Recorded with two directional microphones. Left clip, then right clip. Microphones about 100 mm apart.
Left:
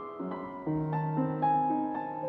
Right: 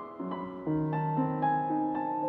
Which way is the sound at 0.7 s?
5° right (ahead or behind).